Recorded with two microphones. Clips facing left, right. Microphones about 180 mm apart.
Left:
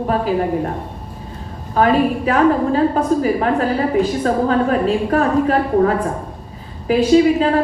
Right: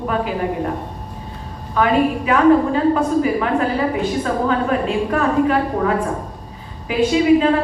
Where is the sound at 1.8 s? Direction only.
40° left (ahead or behind).